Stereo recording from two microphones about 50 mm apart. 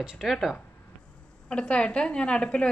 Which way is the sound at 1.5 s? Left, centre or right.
Left.